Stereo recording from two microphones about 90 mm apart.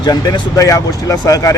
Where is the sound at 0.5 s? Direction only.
40° left (ahead or behind).